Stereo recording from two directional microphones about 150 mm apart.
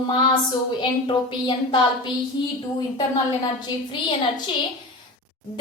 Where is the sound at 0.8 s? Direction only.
30° left (ahead or behind).